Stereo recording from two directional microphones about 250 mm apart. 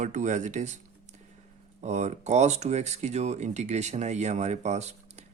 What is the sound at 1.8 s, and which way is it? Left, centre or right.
Speech, right.